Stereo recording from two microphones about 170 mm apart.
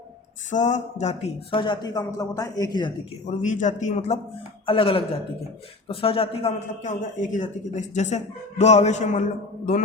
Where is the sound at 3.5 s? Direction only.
50° left (ahead or behind).